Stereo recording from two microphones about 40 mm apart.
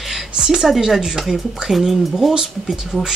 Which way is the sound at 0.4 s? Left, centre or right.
Centre.